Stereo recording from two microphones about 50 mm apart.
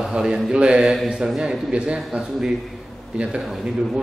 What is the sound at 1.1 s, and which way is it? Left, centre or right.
Speech, centre.